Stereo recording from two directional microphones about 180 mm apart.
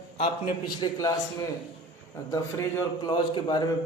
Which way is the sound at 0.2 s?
35° left (ahead or behind).